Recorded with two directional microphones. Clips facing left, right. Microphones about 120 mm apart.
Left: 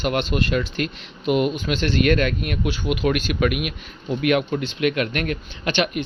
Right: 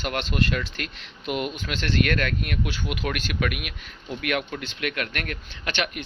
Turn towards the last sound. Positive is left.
turn(degrees=20)  # may be behind; listen again after turning